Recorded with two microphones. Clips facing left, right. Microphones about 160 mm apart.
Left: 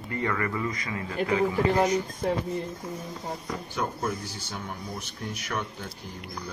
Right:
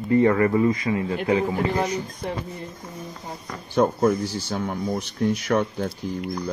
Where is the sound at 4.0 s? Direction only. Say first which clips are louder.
Right 11 dB; 50° right (ahead or behind).